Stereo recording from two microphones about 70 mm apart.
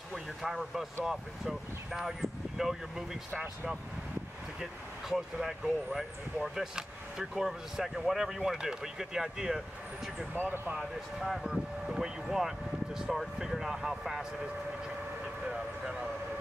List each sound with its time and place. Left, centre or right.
0.1 s speech: centre
5.1 s speech: centre
10.3 s speech: right
10.8 s speech: centre
15.4 s speech: centre